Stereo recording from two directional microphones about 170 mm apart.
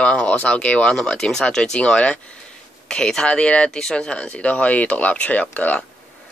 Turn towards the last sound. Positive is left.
turn(degrees=10)  # may be behind; listen again after turning